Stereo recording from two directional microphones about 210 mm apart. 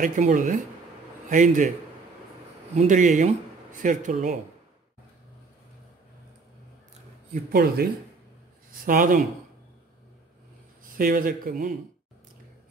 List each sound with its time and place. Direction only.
0.0 s speech: 35° right (ahead or behind)
2.7 s speech: 35° right (ahead or behind)
7.5 s speech: 45° right (ahead or behind)
11.0 s speech: 40° right (ahead or behind)